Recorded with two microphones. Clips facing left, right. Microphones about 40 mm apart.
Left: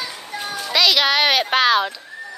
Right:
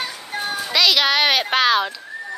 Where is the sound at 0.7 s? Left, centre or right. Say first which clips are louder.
Left 1 dB; centre.